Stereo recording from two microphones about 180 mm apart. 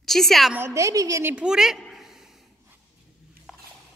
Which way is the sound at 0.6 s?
15° right (ahead or behind).